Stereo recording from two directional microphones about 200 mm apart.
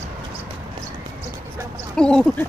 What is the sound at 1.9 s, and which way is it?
Speech, 5° left (ahead or behind).